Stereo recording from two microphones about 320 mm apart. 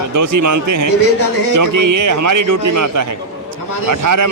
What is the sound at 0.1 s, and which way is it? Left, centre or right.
A man's voice, right.